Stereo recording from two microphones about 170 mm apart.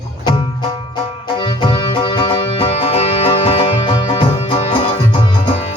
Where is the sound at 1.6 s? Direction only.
25° left (ahead or behind).